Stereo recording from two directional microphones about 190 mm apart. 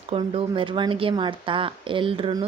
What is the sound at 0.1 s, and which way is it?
A woman's voice, 30° right (ahead or behind).